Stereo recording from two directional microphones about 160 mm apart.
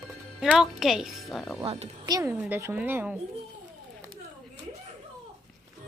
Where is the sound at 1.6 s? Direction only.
40° right (ahead or behind).